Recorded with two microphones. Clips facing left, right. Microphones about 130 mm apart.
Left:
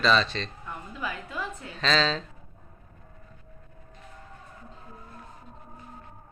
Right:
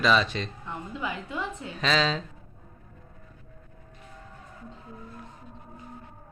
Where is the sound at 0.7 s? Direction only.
25° right (ahead or behind).